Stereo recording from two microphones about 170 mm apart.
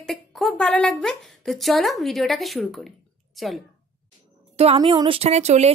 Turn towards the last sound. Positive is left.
turn(degrees=-40)  # may be behind; listen again after turning